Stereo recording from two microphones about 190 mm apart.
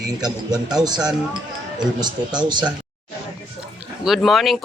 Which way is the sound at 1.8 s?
20° right (ahead or behind).